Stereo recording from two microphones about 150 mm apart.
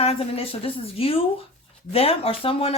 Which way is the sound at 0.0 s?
40° left (ahead or behind).